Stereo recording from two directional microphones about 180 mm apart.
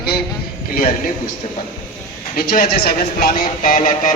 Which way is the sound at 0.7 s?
50° left (ahead or behind).